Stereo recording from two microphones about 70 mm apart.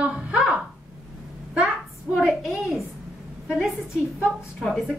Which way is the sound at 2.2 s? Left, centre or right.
Centre.